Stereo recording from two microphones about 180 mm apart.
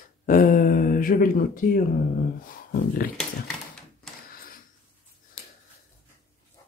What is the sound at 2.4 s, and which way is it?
Speech, 50° left (ahead or behind).